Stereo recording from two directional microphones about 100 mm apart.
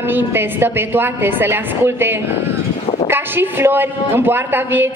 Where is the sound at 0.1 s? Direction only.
20° right (ahead or behind).